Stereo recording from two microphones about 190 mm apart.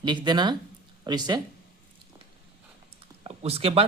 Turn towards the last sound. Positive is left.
turn(degrees=-30)  # may be behind; listen again after turning